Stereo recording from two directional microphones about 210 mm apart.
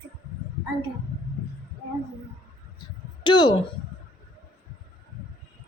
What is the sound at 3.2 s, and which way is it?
Speech, 20° left (ahead or behind).